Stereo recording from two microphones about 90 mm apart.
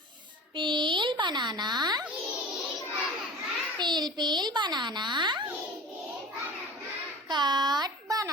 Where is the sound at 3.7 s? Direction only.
55° right (ahead or behind).